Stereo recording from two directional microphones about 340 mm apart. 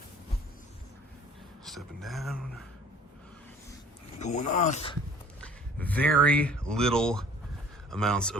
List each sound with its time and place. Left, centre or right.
1.6 s speech: centre
4.2 s speech: left
5.4 s speech: centre